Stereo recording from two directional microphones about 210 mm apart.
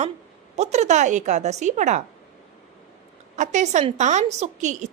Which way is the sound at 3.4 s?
35° right (ahead or behind).